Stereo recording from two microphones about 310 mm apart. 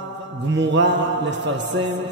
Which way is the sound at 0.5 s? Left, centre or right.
Right.